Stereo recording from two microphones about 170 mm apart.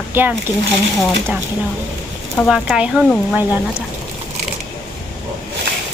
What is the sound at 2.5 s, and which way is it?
A woman's voice, 5° right (ahead or behind).